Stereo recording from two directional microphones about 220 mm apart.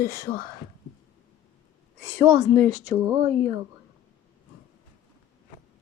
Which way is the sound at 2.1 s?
30° right (ahead or behind).